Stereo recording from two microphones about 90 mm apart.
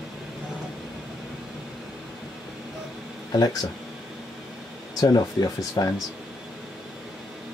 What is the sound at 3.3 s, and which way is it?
Speech, 45° left (ahead or behind).